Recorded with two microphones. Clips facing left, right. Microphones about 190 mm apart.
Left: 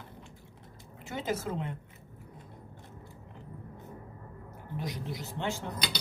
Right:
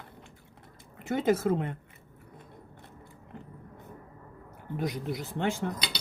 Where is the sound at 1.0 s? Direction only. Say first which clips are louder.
Right 8 dB; 55° right (ahead or behind).